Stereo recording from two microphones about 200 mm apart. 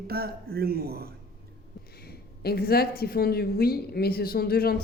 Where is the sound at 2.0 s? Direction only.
50° left (ahead or behind).